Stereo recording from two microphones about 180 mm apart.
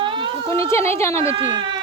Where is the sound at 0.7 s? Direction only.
15° left (ahead or behind).